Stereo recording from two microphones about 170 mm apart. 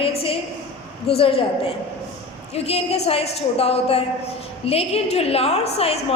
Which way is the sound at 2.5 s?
35° left (ahead or behind).